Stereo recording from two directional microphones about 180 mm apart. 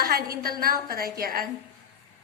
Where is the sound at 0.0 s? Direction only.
55° right (ahead or behind).